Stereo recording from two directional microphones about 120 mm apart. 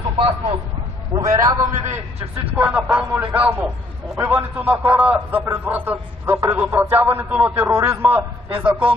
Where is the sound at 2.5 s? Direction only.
10° right (ahead or behind).